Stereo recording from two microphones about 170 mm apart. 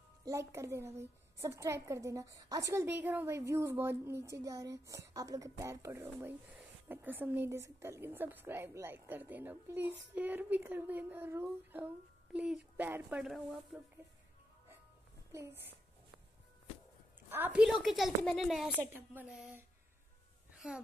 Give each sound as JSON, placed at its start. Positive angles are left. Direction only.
{"t": 0.2, "sound": "a woman's voice", "side_deg": -15}
{"t": 15.3, "sound": "a woman's voice", "side_deg": -15}
{"t": 17.3, "sound": "a woman's voice", "side_deg": -10}
{"t": 20.5, "sound": "a sound", "side_deg": -5}